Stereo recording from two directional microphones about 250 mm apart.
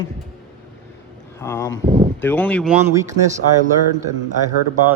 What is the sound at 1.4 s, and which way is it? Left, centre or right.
Speech, centre.